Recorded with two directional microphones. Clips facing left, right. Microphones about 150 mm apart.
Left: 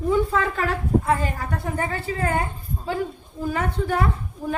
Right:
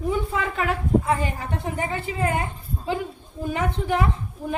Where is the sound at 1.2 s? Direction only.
20° right (ahead or behind).